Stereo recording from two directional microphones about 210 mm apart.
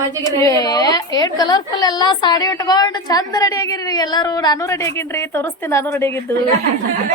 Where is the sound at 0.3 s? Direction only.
15° left (ahead or behind).